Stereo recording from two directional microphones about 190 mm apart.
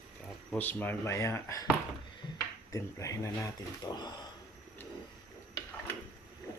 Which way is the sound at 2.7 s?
15° left (ahead or behind).